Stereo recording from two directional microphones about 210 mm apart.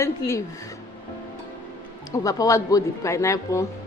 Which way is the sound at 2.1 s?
15° left (ahead or behind).